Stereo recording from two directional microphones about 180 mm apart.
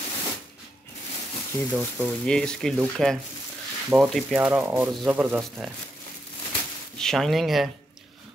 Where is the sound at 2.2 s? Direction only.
5° left (ahead or behind); by 5.4 s 10° right (ahead or behind).